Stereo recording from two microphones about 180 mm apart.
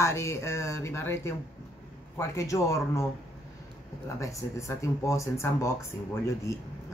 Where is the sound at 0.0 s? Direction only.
15° left (ahead or behind).